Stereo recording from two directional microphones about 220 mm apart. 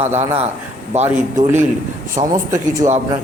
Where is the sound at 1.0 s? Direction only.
10° right (ahead or behind).